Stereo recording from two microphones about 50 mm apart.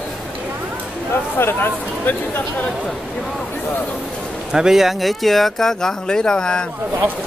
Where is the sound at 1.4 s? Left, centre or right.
Left.